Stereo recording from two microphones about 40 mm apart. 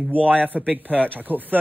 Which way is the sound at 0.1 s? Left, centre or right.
Right.